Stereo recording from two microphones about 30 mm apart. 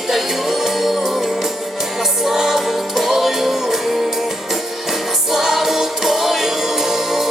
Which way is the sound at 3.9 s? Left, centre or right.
Centre.